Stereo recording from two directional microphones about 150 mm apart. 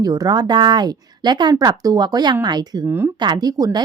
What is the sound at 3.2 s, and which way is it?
Speech, 25° right (ahead or behind).